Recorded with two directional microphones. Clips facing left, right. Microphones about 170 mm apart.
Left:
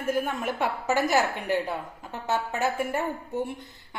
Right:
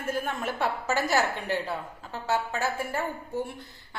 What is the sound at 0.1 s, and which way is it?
A woman's voice, 10° left (ahead or behind).